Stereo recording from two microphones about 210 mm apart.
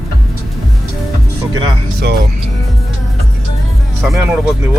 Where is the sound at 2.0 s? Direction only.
50° right (ahead or behind).